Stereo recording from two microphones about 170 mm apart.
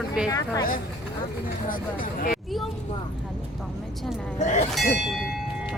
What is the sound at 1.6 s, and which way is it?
Speech, 55° left (ahead or behind).